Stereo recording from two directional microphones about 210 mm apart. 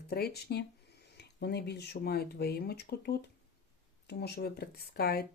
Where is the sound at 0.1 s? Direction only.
50° left (ahead or behind).